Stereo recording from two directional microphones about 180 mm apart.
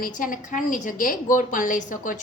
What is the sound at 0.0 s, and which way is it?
A woman's voice, 45° left (ahead or behind).